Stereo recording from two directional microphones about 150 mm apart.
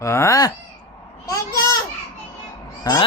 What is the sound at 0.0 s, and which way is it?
Speech, 20° left (ahead or behind).